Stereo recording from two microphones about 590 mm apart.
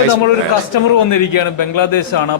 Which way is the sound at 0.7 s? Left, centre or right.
Left.